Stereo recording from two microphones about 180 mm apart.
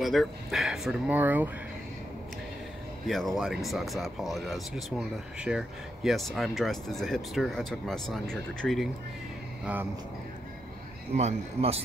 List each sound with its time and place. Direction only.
0.0 s speech: centre (ahead or behind)
3.1 s speech: centre (ahead or behind)
11.1 s speech: 35° right (ahead or behind)